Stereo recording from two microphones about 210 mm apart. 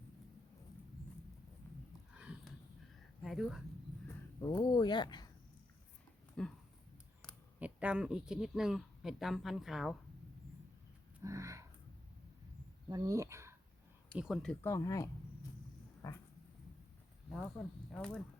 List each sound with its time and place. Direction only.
1.6 s a sound: 10° left (ahead or behind)
2.1 s a sound: 5° right (ahead or behind)
3.2 s speech: centre (ahead or behind)
4.1 s speech: 15° left (ahead or behind)
6.4 s speech: 5° left (ahead or behind)
7.6 s speech: 5° right (ahead or behind)
11.2 s a sound: 15° right (ahead or behind)
12.9 s speech: 15° right (ahead or behind)
14.2 s speech: centre (ahead or behind)
14.6 s speech: 15° left (ahead or behind)
16.0 s dog: 15° left (ahead or behind)
17.9 s speech: 5° left (ahead or behind)